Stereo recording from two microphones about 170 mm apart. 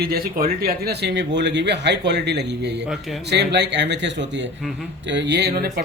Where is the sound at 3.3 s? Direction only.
85° right.